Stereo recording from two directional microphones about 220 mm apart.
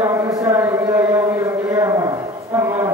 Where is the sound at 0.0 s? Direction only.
10° right (ahead or behind).